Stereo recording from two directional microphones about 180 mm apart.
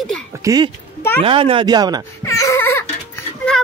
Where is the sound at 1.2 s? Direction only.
30° right (ahead or behind).